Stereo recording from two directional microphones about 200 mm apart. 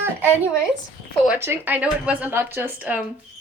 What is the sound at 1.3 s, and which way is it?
Speech, 10° right (ahead or behind).